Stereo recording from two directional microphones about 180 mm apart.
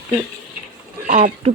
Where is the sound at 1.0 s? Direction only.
40° right (ahead or behind).